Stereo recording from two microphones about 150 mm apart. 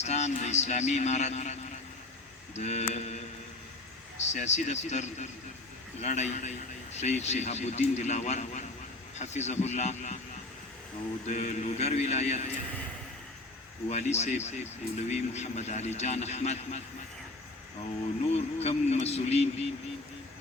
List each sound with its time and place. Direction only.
0.0 s speech: 50° left (ahead or behind)
4.3 s speech: 50° left (ahead or behind)
11.3 s speech: 50° left (ahead or behind)
13.9 s speech: 45° left (ahead or behind)
18.3 s speech: 45° left (ahead or behind)